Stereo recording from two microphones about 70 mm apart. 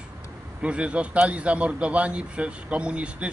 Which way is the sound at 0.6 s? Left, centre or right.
Centre.